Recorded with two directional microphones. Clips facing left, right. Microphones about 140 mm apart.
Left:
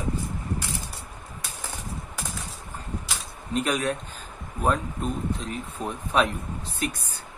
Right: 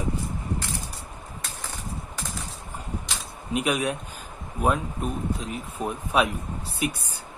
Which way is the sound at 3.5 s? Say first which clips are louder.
Even; 10° right (ahead or behind).